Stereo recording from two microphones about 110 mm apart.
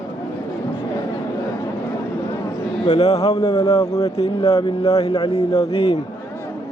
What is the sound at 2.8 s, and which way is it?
Speech, 85° left.